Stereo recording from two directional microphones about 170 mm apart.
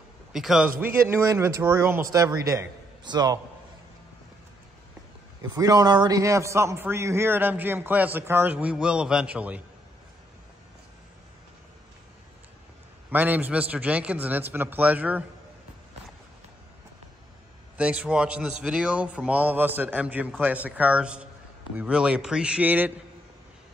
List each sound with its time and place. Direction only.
0.3 s a man's voice: 5° right (ahead or behind); by 3.3 s 25° right (ahead or behind)
5.5 s a man's voice: 20° right (ahead or behind)
13.1 s a man's voice: 10° right (ahead or behind)
17.7 s a man's voice: 5° right (ahead or behind)